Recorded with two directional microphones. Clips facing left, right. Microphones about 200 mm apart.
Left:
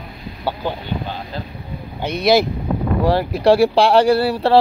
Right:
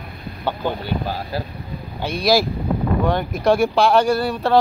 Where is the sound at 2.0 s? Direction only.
20° left (ahead or behind).